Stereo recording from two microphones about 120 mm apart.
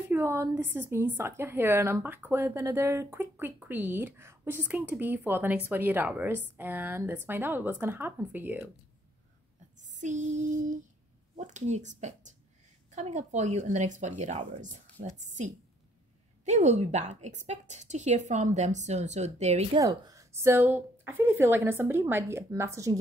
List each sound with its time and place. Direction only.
0.1 s a woman's voice: 20° right (ahead or behind)
9.8 s a sound: 90° right
11.3 s speech: 80° right
12.9 s speech: 75° right (ahead or behind)
16.4 s a woman's voice: 70° right (ahead or behind)
19.8 s a woman's voice: 30° right (ahead or behind)